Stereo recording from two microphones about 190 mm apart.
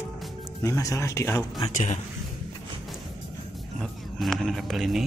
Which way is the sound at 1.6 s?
40° left (ahead or behind).